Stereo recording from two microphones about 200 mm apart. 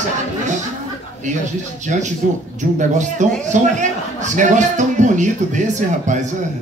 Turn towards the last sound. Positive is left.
turn(degrees=-40)  # may be behind; listen again after turning